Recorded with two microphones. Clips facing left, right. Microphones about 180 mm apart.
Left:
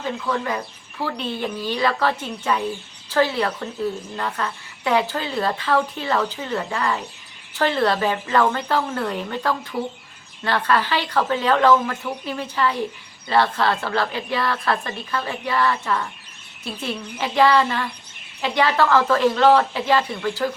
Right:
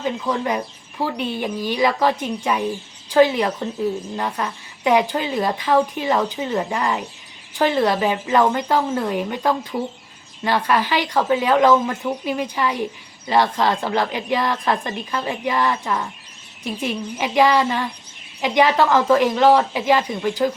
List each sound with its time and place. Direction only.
0.0 s a woman's voice: 20° right (ahead or behind)